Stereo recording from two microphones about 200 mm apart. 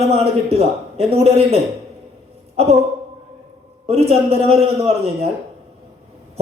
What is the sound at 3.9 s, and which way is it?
Speech, 30° right (ahead or behind).